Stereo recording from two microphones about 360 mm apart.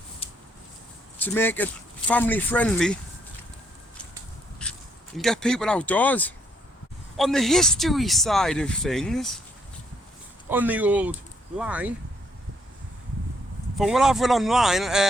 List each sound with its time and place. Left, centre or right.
0.2 s a sound: centre
1.2 s speech: centre
4.6 s a sound: centre
5.1 s speech: centre
10.5 s speech: centre
13.7 s speech: centre